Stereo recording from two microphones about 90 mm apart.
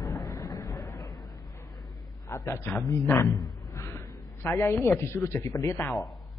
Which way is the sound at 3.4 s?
45° left (ahead or behind).